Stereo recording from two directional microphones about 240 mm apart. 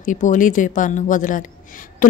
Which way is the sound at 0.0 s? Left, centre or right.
Left.